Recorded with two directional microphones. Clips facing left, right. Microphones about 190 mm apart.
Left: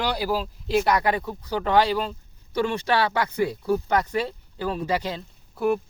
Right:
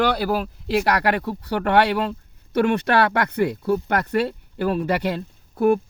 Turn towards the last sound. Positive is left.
turn(degrees=-55)  # may be behind; listen again after turning